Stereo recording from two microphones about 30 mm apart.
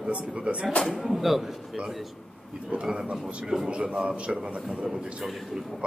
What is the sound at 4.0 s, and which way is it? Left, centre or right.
Speech, right.